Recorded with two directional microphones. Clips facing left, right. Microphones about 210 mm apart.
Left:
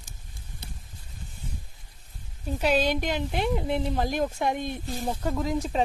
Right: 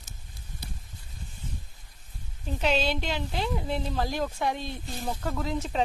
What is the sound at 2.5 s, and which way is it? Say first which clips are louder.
A woman's voice: left 3 dB; 10° left (ahead or behind).